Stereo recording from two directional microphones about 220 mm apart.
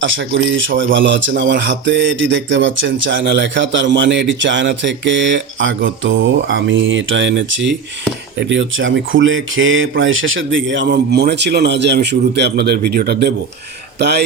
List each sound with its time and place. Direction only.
0.0 s speech: 60° right (ahead or behind)